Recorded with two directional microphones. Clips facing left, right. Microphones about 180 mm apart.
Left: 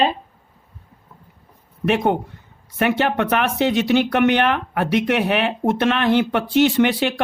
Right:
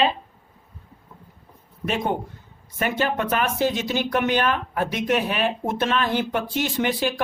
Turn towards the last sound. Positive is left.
turn(degrees=70)  # may be behind; listen again after turning